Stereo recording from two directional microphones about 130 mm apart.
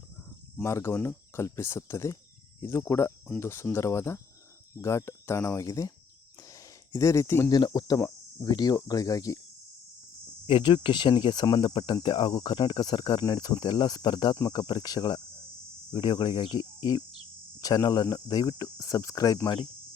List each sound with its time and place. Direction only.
0.5 s speech: 20° left (ahead or behind)
6.5 s a sound: 25° left (ahead or behind)
7.5 s speech: 30° left (ahead or behind)
10.4 s speech: 40° left (ahead or behind)